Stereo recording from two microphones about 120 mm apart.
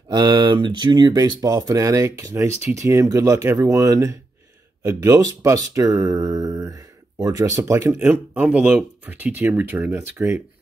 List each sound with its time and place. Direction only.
0.1 s speech: 40° right (ahead or behind); by 10.4 s 15° right (ahead or behind)